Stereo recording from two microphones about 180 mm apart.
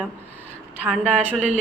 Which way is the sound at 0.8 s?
5° right (ahead or behind).